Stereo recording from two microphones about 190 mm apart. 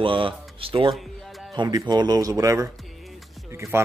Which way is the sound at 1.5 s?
20° right (ahead or behind).